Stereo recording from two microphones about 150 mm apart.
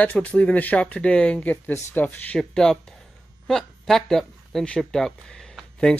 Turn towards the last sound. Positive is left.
turn(degrees=5)  # may be behind; listen again after turning